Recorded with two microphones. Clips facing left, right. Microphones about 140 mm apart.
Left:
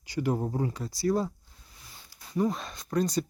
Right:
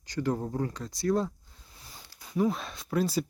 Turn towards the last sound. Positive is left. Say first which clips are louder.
# left 1 dB
turn(degrees=-5)  # may be behind; listen again after turning